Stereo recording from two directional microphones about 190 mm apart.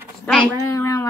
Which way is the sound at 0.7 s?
15° left (ahead or behind).